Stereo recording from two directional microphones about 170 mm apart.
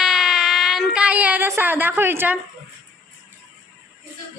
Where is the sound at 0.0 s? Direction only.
Centre (ahead or behind).